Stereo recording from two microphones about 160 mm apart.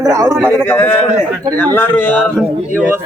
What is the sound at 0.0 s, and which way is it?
Speech, 20° right (ahead or behind).